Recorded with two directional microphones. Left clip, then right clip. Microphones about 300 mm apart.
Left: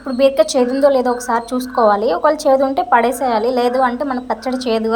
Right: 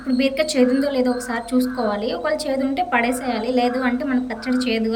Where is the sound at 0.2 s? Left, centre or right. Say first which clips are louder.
Left 7 dB; centre.